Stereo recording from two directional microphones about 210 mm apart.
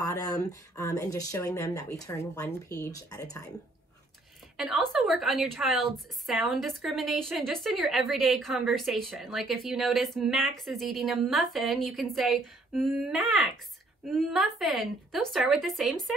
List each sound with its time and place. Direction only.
0.0 s speech: 15° left (ahead or behind)
4.6 s a woman's voice: centre (ahead or behind)